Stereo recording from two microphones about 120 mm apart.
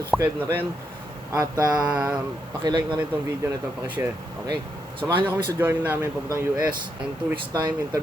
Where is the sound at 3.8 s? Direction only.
15° right (ahead or behind).